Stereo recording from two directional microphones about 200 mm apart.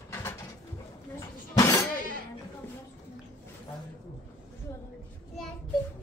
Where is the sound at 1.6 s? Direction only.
15° left (ahead or behind).